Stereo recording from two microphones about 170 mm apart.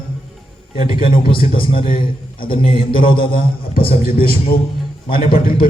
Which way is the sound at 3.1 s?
60° left (ahead or behind).